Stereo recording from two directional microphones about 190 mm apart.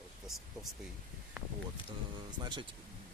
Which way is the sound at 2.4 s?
25° right (ahead or behind).